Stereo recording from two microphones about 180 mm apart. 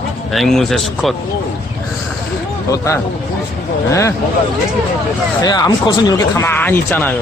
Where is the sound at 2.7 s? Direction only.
15° left (ahead or behind).